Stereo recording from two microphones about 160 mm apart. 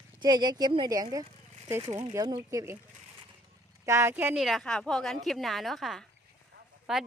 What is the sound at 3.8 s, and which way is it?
Speech, 15° right (ahead or behind).